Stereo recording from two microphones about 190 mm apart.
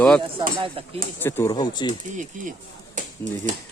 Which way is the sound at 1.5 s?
20° left (ahead or behind).